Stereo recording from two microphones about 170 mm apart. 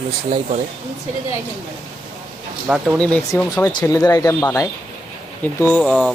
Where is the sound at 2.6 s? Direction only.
5° right (ahead or behind).